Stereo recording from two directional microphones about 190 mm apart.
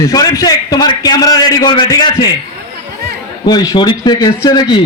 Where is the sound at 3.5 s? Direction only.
20° left (ahead or behind).